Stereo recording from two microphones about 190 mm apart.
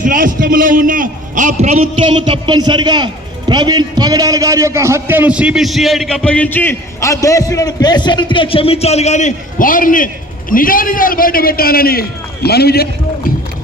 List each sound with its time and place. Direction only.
0.0 s a man's voice: 45° right (ahead or behind); by 12.9 s 55° left (ahead or behind)